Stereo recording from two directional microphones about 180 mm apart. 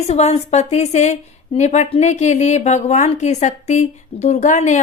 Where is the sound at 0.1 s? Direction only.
40° left (ahead or behind).